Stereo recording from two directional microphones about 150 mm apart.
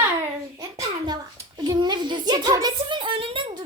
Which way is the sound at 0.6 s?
25° right (ahead or behind).